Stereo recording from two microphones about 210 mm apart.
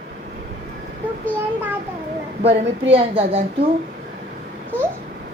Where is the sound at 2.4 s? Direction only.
25° right (ahead or behind).